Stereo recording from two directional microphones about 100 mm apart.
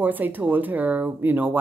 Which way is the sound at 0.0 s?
20° right (ahead or behind).